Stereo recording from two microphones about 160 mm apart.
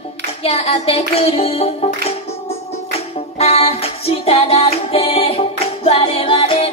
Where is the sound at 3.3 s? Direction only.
40° left (ahead or behind).